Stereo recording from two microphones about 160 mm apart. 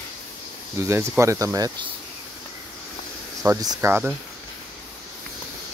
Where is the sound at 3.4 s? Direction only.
15° right (ahead or behind).